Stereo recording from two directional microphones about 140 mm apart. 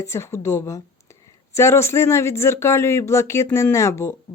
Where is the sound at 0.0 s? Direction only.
20° left (ahead or behind).